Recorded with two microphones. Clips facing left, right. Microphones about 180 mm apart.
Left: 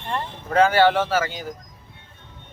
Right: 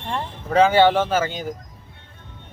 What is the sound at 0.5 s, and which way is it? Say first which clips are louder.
Speech: right 2 dB; 20° right (ahead or behind).